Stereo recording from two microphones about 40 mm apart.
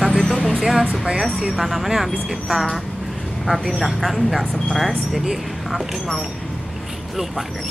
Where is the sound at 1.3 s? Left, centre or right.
Centre.